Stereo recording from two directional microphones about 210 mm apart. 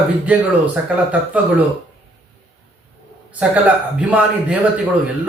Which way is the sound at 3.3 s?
5° right (ahead or behind).